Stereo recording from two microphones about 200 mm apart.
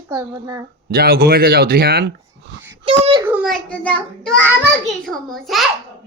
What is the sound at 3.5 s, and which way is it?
A child's voice, 5° left (ahead or behind).